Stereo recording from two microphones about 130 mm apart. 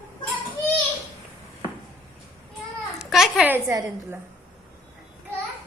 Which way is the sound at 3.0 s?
5° right (ahead or behind).